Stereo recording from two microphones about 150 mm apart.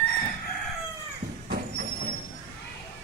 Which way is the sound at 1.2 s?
55° right (ahead or behind).